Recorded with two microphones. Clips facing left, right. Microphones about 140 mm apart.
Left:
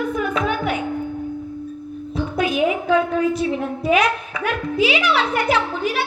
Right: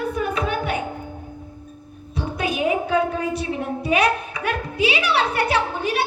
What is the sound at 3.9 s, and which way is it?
Music, 35° right (ahead or behind).